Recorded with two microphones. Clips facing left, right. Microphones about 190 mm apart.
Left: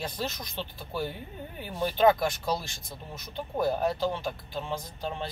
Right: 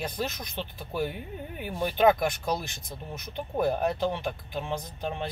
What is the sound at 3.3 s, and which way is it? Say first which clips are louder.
Speech: right 1 dB; 20° right (ahead or behind).